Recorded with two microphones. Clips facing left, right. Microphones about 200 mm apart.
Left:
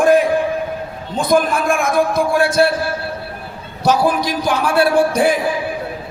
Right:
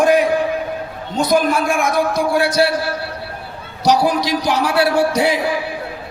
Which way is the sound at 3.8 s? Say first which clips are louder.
Even; 55° left (ahead or behind).